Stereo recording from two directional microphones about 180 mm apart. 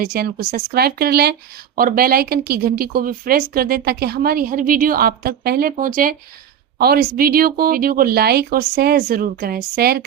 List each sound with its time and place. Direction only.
0.0 s a woman's voice: 55° right (ahead or behind)